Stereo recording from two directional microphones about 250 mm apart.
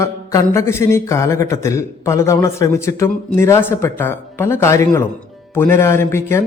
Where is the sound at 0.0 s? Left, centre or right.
Centre.